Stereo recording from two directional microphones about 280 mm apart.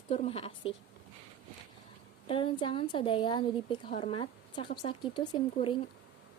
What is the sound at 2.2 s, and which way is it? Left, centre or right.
A woman's voice, centre.